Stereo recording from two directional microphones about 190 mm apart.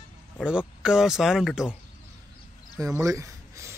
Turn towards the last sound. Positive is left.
turn(degrees=-15)  # may be behind; listen again after turning